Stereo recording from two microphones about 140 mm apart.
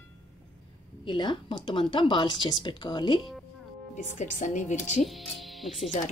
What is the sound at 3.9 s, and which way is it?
Speech, 60° left (ahead or behind).